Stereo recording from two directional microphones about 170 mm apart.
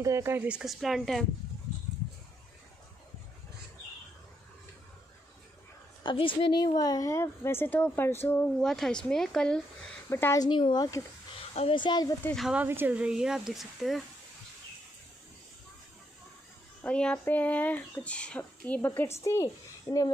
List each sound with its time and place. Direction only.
0.0 s speech: 15° right (ahead or behind); by 1.2 s centre (ahead or behind)
6.0 s a woman's voice: 30° left (ahead or behind); by 9.6 s 5° left (ahead or behind)
10.0 s speech: 15° left (ahead or behind)
12.3 s speech: centre (ahead or behind)
12.6 s speech: 10° right (ahead or behind)
16.8 s a woman's voice: 5° left (ahead or behind)